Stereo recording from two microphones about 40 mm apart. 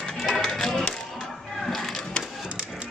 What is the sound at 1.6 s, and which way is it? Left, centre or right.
Music, centre.